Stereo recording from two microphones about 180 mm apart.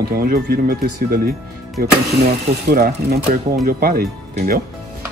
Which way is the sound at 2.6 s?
60° right (ahead or behind).